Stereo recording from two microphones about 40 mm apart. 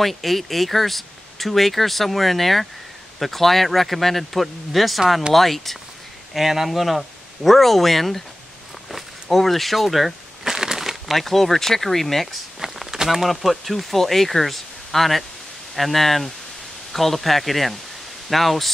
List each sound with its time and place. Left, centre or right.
0.0 s speech: centre
6.3 s speech: centre
8.9 s a sound: centre
11.1 s speech: centre
12.5 s speech: centre